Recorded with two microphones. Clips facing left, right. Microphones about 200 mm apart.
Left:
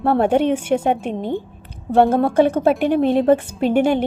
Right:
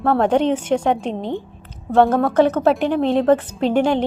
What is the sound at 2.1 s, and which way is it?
Speech, 30° left (ahead or behind).